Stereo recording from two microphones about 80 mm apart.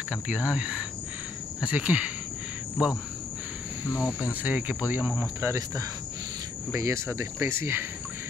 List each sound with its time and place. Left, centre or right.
0.1 s speech: centre
4.0 s cricket: centre
5.2 s speech: right